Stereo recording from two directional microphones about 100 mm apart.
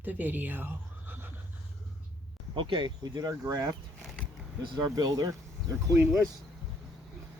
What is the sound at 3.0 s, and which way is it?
Speech, 40° right (ahead or behind).